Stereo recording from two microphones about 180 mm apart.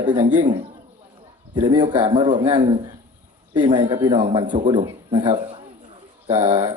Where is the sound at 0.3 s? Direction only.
45° right (ahead or behind).